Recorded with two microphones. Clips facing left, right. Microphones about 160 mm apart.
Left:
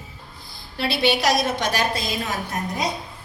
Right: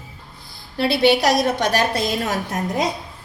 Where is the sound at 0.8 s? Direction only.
40° right (ahead or behind).